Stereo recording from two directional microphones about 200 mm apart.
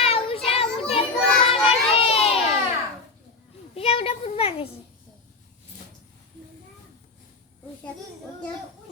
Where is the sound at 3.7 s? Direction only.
30° left (ahead or behind).